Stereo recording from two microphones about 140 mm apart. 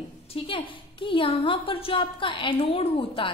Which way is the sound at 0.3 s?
40° left (ahead or behind).